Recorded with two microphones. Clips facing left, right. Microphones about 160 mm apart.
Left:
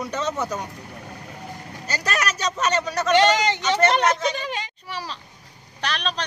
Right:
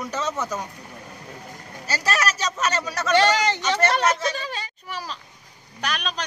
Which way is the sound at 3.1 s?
20° left (ahead or behind).